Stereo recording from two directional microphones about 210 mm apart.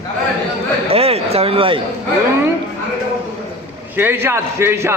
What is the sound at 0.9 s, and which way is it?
Speech, 30° right (ahead or behind).